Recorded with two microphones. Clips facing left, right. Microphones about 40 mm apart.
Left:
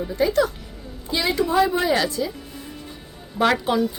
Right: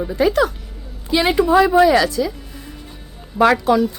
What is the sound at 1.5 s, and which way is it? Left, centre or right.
Speech, right.